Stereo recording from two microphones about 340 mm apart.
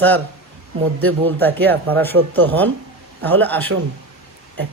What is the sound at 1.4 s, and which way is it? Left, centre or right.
Speech, centre.